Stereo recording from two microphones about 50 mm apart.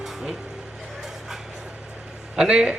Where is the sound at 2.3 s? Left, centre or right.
Centre.